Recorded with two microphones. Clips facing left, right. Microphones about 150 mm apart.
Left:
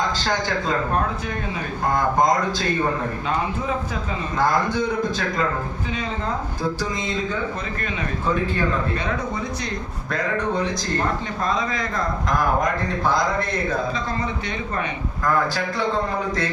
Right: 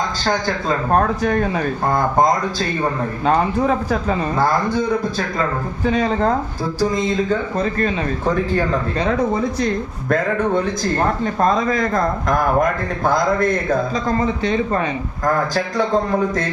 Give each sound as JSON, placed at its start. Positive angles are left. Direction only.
{"t": 0.9, "sound": "speech", "side_deg": -50}
{"t": 3.2, "sound": "speech", "side_deg": -50}
{"t": 5.8, "sound": "speech", "side_deg": -40}
{"t": 7.6, "sound": "speech", "side_deg": -35}
{"t": 11.3, "sound": "speech", "side_deg": -50}